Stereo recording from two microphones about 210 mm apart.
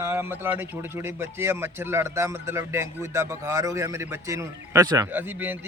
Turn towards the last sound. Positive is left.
turn(degrees=-10)  # may be behind; listen again after turning